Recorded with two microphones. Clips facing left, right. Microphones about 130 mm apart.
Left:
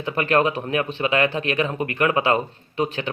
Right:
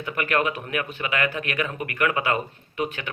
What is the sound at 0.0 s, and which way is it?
Speech, 30° left (ahead or behind).